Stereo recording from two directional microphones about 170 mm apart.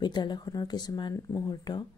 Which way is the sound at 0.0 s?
25° left (ahead or behind).